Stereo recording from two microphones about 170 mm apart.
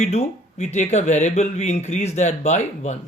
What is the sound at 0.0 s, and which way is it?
Speech, 40° left (ahead or behind).